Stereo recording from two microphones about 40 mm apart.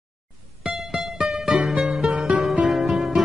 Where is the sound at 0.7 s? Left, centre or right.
Centre.